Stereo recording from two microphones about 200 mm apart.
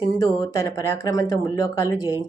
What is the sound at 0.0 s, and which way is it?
Speech, 15° left (ahead or behind).